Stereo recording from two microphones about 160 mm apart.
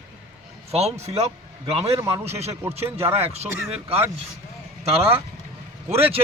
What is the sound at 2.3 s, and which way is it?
Speech, 40° right (ahead or behind).